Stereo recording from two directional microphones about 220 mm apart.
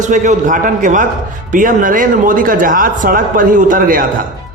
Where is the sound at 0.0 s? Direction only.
35° right (ahead or behind).